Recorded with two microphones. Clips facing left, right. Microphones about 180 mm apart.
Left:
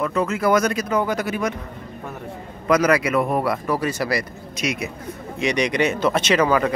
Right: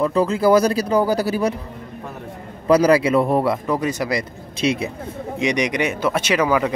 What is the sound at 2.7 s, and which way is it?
Speech, 30° right (ahead or behind).